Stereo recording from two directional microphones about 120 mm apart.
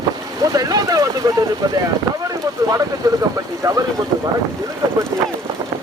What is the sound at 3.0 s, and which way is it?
Speech, 30° right (ahead or behind).